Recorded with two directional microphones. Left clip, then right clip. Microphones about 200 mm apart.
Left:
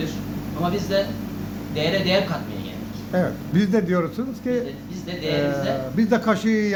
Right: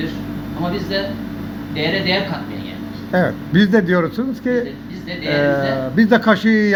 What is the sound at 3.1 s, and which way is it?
Speech, 10° right (ahead or behind).